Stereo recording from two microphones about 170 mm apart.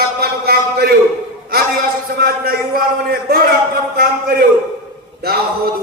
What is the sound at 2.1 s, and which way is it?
Speech, 60° right (ahead or behind).